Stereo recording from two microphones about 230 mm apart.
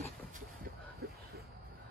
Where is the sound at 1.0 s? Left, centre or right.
Right.